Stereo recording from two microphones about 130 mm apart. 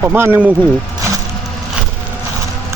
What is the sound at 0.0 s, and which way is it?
Speech, 20° right (ahead or behind).